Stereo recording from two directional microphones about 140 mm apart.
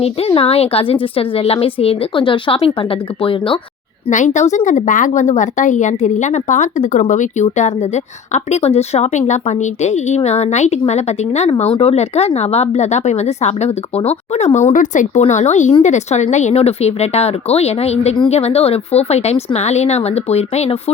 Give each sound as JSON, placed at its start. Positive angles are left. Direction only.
{"t": 0.0, "sound": "a woman's voice", "side_deg": 40}
{"t": 4.1, "sound": "a woman's voice", "side_deg": 60}
{"t": 14.7, "sound": "a woman's voice", "side_deg": 65}